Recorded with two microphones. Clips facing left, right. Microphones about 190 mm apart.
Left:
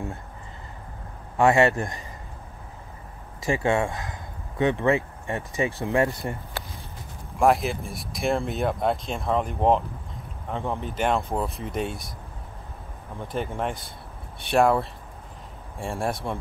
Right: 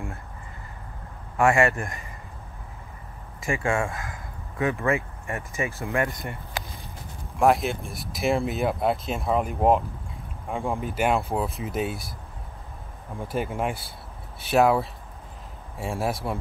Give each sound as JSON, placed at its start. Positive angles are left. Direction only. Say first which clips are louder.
{"t": 1.4, "sound": "speech", "louder": "left 2 dB", "side_deg": 20}
{"t": 1.7, "sound": "speech", "louder": "left 3 dB", "side_deg": 35}
{"t": 3.6, "sound": "speech", "louder": "left 2 dB", "side_deg": 25}
{"t": 7.3, "sound": "speech", "louder": "even", "side_deg": 0}
{"t": 13.2, "sound": "speech", "louder": "right 1 dB", "side_deg": -10}